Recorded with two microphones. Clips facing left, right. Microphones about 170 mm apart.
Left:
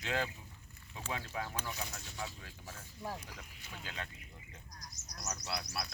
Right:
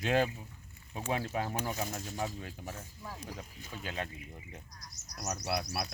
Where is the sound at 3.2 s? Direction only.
30° right (ahead or behind).